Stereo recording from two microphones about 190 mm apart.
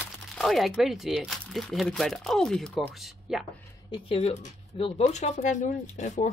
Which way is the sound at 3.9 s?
30° left (ahead or behind).